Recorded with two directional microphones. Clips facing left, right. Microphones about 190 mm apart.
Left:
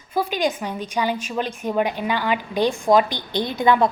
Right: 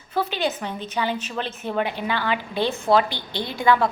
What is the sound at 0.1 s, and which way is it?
A woman's voice, 10° left (ahead or behind).